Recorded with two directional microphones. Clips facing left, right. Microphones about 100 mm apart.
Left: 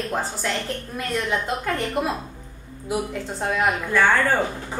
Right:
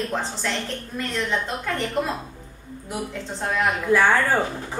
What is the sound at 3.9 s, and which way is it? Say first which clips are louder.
Speech: right 2 dB; 5° right (ahead or behind).